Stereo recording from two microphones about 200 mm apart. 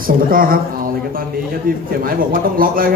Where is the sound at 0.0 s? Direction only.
45° right (ahead or behind).